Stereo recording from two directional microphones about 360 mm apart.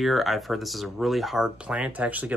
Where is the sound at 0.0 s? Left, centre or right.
Centre.